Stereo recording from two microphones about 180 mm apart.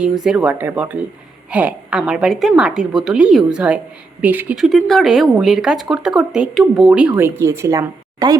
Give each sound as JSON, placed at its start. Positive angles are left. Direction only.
{"t": 0.0, "sound": "speech", "side_deg": 0}